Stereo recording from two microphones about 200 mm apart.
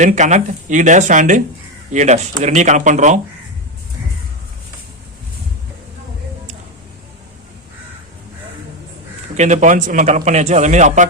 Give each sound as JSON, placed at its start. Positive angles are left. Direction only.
{"t": 0.0, "sound": "a man's voice", "side_deg": -35}
{"t": 9.3, "sound": "a man's voice", "side_deg": -35}